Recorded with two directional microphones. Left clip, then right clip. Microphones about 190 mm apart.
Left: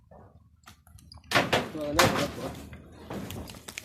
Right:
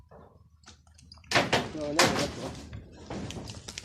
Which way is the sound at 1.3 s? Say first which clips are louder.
Left 1 dB; 40° left (ahead or behind).